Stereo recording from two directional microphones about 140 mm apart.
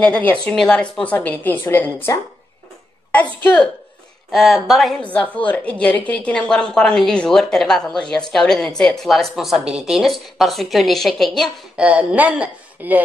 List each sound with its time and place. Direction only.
0.0 s a woman's voice: 10° left (ahead or behind)
3.1 s a woman's voice: 10° left (ahead or behind)
4.3 s a woman's voice: centre (ahead or behind)